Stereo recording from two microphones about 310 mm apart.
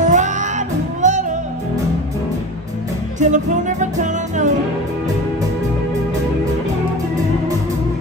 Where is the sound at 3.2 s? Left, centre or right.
Right.